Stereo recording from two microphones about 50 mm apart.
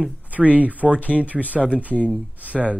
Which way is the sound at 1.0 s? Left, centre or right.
Left.